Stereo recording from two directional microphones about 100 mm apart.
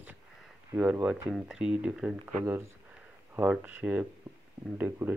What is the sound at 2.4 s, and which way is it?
Speech, 30° right (ahead or behind).